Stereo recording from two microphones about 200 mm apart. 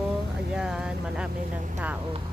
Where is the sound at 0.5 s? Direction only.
5° right (ahead or behind).